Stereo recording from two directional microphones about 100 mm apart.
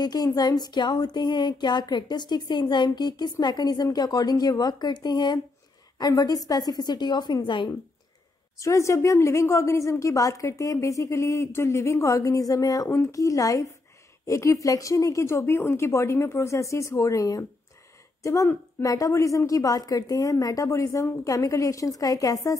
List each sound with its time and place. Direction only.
0.0 s a sound: 40° left (ahead or behind)
5.9 s a woman's voice: 40° left (ahead or behind)
8.5 s a woman's voice: 30° left (ahead or behind)